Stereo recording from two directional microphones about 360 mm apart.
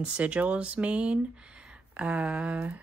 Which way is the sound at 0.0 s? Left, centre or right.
Centre.